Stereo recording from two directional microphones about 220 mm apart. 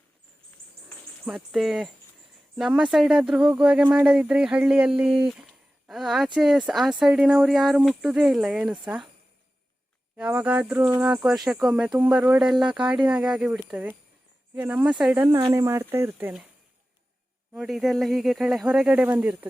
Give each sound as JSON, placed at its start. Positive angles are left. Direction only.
{"t": 1.2, "sound": "speech", "side_deg": 0}
{"t": 10.2, "sound": "speech", "side_deg": -5}
{"t": 10.8, "sound": "cricket", "side_deg": -20}
{"t": 11.0, "sound": "speech", "side_deg": -5}
{"t": 17.5, "sound": "speech", "side_deg": 0}